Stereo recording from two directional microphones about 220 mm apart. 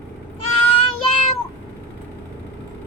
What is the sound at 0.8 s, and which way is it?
Child singing, 25° left (ahead or behind).